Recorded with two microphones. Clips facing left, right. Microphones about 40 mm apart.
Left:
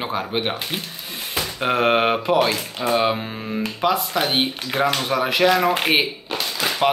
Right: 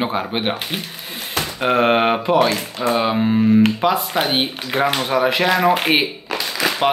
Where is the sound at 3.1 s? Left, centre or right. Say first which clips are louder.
Right 13 dB; centre.